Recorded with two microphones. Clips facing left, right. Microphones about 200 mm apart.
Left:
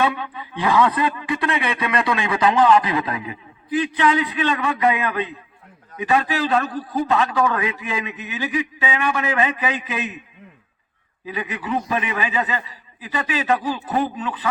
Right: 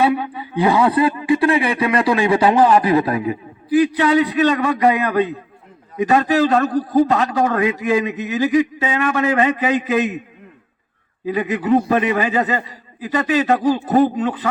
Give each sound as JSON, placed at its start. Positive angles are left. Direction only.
{"t": 0.0, "sound": "a man's voice", "side_deg": -35}
{"t": 11.3, "sound": "a man's voice", "side_deg": -40}